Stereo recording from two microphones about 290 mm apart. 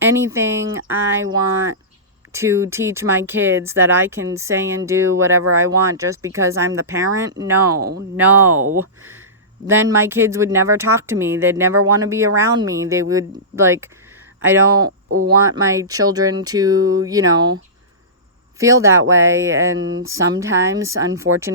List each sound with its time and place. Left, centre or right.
0.0 s speech: centre
2.3 s speech: centre
7.6 s speech: right
8.1 s speech: centre
9.6 s speech: centre
15.1 s speech: right
15.5 s speech: centre
18.6 s speech: centre
19.7 s speech: right
20.1 s speech: centre